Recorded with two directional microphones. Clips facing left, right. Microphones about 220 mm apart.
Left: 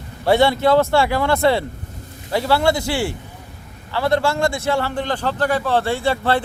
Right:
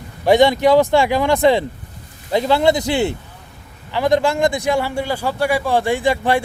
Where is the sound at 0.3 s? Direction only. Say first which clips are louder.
Right 3 dB; 15° right (ahead or behind).